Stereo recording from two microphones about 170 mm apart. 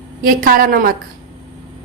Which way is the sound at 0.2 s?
55° right (ahead or behind).